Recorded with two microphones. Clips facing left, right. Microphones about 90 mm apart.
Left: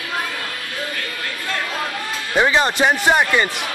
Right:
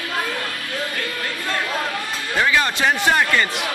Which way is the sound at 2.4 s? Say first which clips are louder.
Left 3 dB; 25° left (ahead or behind).